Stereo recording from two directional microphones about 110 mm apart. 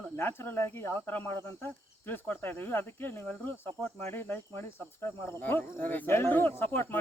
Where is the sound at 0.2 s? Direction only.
20° left (ahead or behind).